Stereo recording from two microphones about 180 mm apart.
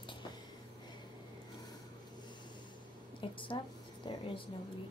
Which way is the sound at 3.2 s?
30° left (ahead or behind).